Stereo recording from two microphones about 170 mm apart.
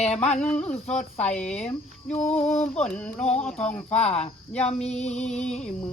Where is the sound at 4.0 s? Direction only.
40° left (ahead or behind).